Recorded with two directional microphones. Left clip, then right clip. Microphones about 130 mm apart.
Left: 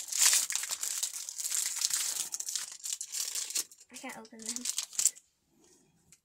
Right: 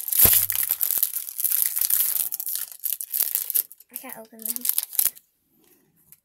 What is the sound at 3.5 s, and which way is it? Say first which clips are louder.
Crumpling: right 1 dB; 40° right (ahead or behind).